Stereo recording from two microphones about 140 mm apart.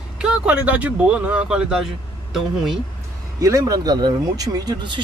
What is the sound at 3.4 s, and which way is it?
Speech, 25° right (ahead or behind).